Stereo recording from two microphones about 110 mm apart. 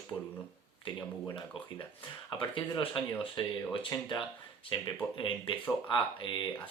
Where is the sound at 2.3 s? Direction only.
50° left (ahead or behind).